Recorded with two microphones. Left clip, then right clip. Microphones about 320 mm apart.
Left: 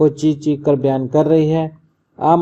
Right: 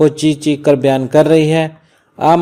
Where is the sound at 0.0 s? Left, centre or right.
Right.